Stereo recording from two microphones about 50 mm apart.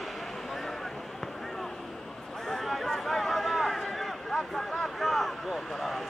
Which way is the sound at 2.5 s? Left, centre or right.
Centre.